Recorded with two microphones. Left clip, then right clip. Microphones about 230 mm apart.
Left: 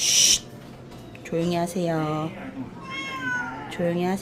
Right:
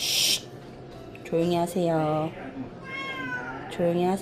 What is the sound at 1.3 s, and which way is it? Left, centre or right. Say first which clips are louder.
Speech: right 1 dB; centre.